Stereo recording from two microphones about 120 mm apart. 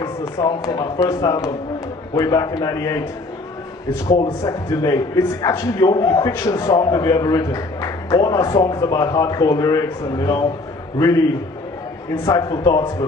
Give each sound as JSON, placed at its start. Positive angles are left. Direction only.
{"t": 0.0, "sound": "a man's voice", "side_deg": 25}
{"t": 4.4, "sound": "a man's voice", "side_deg": 25}
{"t": 12.3, "sound": "a man's voice", "side_deg": 30}